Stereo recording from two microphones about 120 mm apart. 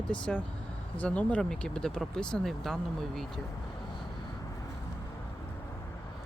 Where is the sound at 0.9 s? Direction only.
10° left (ahead or behind).